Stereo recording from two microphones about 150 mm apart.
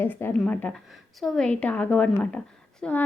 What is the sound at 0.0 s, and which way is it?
A woman's voice, 15° left (ahead or behind).